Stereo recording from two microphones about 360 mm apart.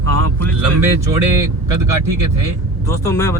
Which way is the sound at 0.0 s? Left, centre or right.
Right.